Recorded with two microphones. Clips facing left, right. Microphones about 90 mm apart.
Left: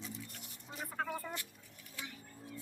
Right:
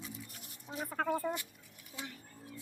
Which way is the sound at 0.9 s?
45° right (ahead or behind).